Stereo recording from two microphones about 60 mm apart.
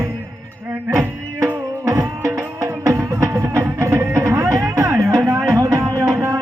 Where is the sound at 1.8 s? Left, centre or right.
Right.